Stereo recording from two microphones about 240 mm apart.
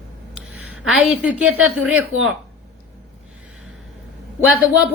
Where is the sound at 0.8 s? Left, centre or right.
Centre.